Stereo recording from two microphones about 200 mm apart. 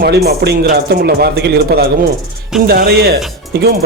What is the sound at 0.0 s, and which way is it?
Speech, 50° right (ahead or behind).